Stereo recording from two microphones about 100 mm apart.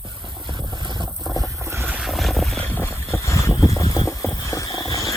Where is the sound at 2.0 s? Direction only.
Centre (ahead or behind).